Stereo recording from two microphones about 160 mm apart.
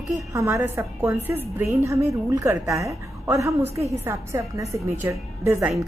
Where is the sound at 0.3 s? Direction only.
20° right (ahead or behind).